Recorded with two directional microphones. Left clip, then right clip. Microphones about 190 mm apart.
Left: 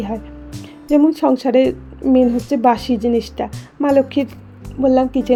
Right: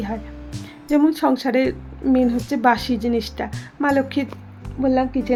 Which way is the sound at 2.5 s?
20° left (ahead or behind).